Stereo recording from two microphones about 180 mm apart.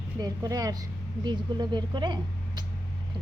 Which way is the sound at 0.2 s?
20° right (ahead or behind).